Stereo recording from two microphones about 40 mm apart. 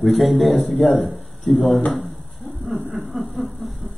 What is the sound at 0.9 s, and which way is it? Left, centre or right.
Speech, centre.